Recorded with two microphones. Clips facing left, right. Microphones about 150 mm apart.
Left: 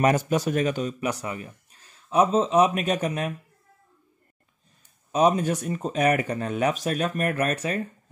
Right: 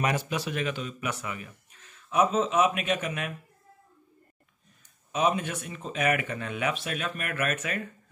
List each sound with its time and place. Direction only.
0.0 s a man's voice: 45° left (ahead or behind)
5.1 s a man's voice: 40° left (ahead or behind)